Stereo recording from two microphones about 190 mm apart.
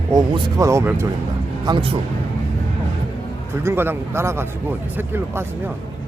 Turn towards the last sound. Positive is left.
turn(degrees=-15)  # may be behind; listen again after turning